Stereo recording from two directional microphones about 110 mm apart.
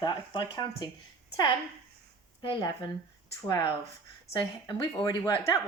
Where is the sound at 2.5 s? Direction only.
40° left (ahead or behind).